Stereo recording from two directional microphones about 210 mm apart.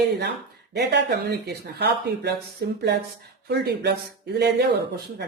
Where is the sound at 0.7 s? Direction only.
55° right (ahead or behind).